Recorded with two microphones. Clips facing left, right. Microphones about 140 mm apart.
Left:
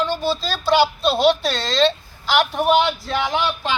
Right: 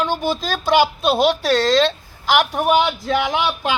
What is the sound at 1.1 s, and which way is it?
Speech, 10° right (ahead or behind).